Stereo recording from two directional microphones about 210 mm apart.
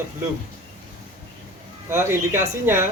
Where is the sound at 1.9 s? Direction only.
10° right (ahead or behind).